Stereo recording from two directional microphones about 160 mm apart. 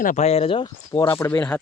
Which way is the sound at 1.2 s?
15° left (ahead or behind).